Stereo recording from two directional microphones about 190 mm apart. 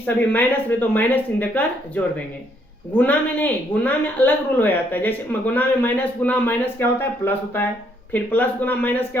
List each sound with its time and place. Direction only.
0.0 s a woman's voice: 10° left (ahead or behind)